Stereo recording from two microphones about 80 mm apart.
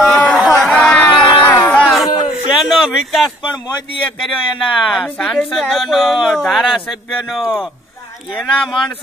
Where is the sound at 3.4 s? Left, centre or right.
Left.